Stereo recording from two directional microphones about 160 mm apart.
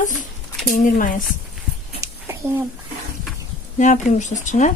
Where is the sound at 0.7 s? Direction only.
55° left (ahead or behind).